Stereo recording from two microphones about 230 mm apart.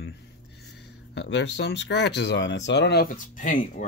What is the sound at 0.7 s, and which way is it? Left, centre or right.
Speech, left.